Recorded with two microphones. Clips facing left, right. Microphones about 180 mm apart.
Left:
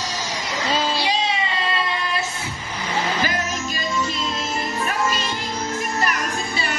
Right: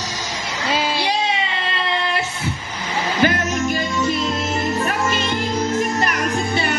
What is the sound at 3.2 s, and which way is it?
Music, 60° right (ahead or behind).